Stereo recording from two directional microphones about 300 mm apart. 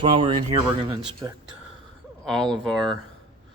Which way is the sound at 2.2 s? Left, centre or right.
Centre.